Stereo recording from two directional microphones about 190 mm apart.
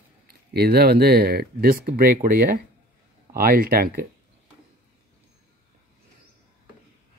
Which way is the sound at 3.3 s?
50° right (ahead or behind).